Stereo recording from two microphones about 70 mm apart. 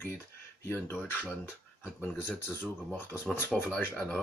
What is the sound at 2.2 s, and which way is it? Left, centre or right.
Speech, left.